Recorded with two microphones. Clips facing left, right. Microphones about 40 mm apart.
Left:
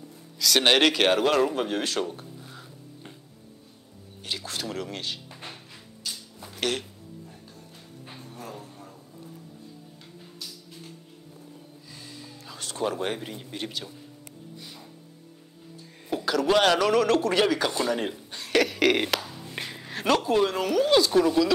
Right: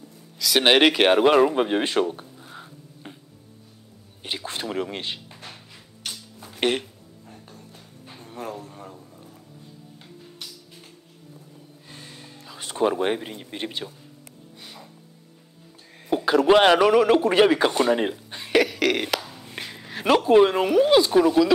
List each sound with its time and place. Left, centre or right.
0.4 s speech: centre; by 2.0 s right
2.0 s a sound: right
4.2 s speech: right
6.0 s music: right
6.5 s music: right
8.5 s a sound: right
10.4 s music: right
11.9 s music: right
12.5 s speech: right
16.1 s a man's voice: right
18.3 s cough: centre
18.6 s speech: centre
19.1 s a sound: centre
20.1 s speech: right